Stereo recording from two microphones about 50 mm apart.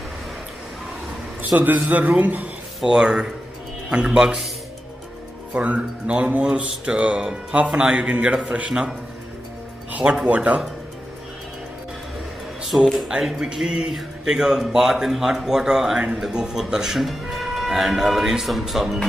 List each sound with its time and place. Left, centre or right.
1.4 s a man's voice: right
2.8 s speech: centre
5.5 s speech: right
10.2 s speech: right
12.6 s speech: centre